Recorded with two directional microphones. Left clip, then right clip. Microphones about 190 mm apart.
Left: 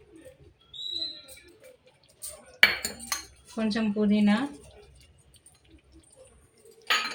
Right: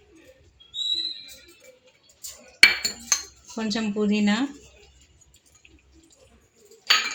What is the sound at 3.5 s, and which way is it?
Speech, 55° right (ahead or behind).